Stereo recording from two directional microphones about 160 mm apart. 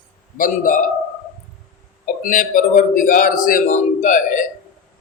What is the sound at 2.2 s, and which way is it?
A man's voice, 60° left (ahead or behind).